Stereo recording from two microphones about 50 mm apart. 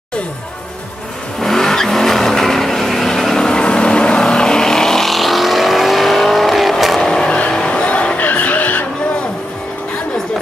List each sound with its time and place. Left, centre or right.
1.4 s vehicle: centre
7.0 s vehicle: centre; by 8.8 s left